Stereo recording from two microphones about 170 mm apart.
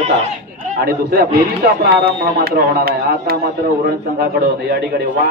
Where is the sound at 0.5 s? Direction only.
50° right (ahead or behind).